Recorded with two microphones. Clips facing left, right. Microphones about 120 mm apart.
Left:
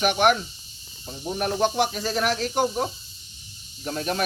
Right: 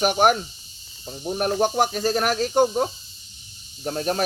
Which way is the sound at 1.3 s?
45° right (ahead or behind).